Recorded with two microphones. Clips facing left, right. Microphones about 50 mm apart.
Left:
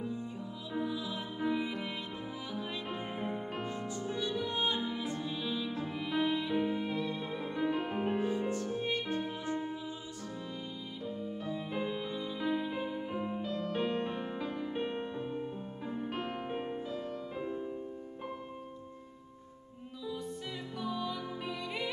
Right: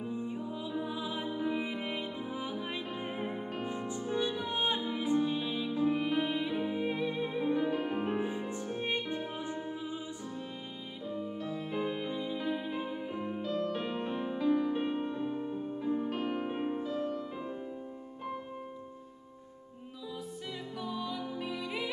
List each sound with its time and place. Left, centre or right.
0.0 s music: right
7.7 s music: centre
8.2 s music: centre
11.8 s music: centre
20.8 s music: centre